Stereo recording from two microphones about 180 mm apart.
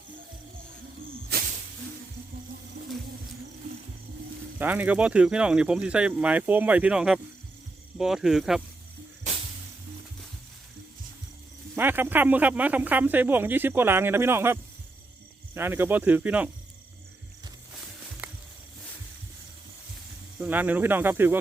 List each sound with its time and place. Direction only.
1.3 s snake: 60° right (ahead or behind)
4.5 s speech: 10° right (ahead or behind)
11.8 s speech: 10° right (ahead or behind)
20.4 s speech: 10° right (ahead or behind)